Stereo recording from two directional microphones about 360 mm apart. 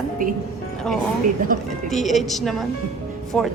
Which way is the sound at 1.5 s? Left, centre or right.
Right.